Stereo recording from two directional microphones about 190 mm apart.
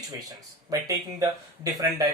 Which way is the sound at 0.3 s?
15° right (ahead or behind).